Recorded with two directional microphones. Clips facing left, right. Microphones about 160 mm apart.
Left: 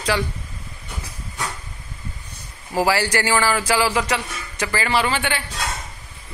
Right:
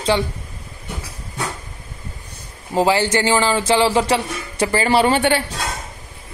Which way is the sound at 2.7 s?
20° right (ahead or behind).